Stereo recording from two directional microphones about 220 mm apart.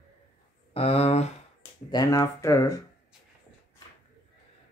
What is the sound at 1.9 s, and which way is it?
Speech, 15° left (ahead or behind).